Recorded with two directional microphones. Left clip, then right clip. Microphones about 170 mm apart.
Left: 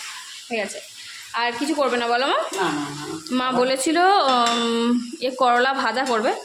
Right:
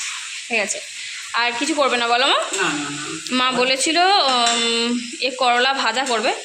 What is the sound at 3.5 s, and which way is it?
Speech, 20° left (ahead or behind).